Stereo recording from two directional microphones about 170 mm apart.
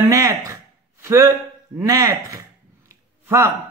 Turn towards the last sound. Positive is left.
turn(degrees=-15)  # may be behind; listen again after turning